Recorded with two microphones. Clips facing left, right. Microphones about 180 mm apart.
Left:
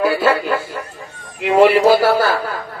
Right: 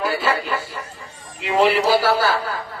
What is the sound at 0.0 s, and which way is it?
Speech, 60° left (ahead or behind).